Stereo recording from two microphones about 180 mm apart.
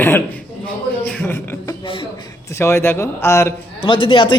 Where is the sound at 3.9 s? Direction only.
30° left (ahead or behind).